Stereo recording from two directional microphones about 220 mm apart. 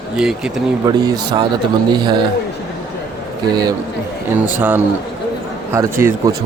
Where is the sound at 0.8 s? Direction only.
15° right (ahead or behind).